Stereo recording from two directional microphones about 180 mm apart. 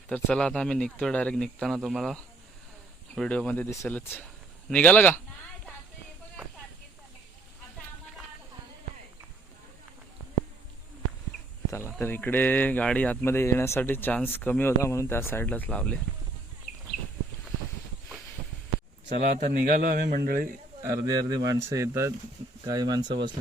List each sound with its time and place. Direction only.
0.1 s speech: 5° left (ahead or behind)
11.9 s speech: 10° left (ahead or behind)
19.2 s a man's voice: 50° right (ahead or behind)
20.8 s speech: 20° right (ahead or behind)